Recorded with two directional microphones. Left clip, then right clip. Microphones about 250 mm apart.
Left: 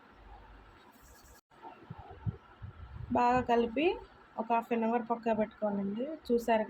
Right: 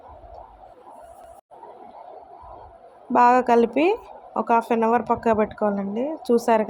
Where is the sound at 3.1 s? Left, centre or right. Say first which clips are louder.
Right 12 dB; right.